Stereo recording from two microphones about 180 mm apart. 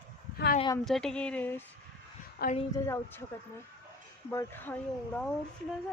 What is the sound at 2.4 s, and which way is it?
Speech, 60° left (ahead or behind).